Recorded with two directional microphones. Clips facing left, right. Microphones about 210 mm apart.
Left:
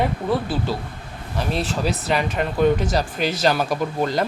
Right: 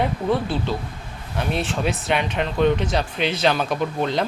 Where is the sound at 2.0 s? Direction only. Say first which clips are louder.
Left 1 dB; centre (ahead or behind).